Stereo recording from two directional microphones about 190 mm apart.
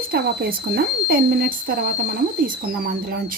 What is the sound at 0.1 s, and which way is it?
Speech, 55° right (ahead or behind).